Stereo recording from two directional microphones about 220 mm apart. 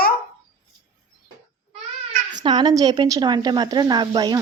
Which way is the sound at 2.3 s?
20° right (ahead or behind).